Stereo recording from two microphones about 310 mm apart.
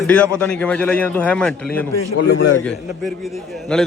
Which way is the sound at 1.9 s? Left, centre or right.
Left.